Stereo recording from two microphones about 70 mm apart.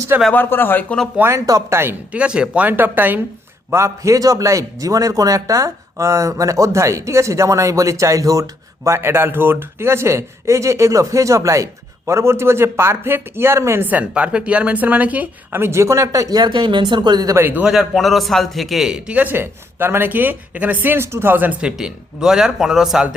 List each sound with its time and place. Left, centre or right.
0.3 s speech: left
1.5 s a man's voice: right
2.1 s a man's voice: centre
3.7 s a man's voice: right
13.8 s a man's voice: centre
15.5 s a man's voice: right
16.4 s speech: right
17.3 s a man's voice: right
17.7 s a man's voice: centre; by 21.5 s right
21.6 s a man's voice: centre